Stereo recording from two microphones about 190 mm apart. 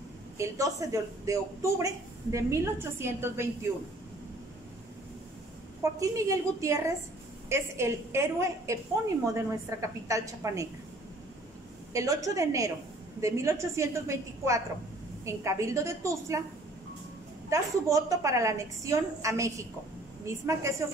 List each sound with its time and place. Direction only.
0.4 s a woman's voice: 15° right (ahead or behind)
5.8 s a woman's voice: 15° right (ahead or behind)
11.9 s a woman's voice: 15° right (ahead or behind)
17.5 s a woman's voice: 15° right (ahead or behind)